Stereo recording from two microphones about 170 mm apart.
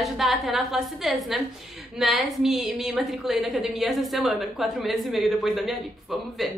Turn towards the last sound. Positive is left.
turn(degrees=0)  # may be behind; listen again after turning